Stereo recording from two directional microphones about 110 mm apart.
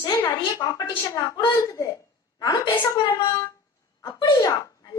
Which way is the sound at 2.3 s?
45° left (ahead or behind).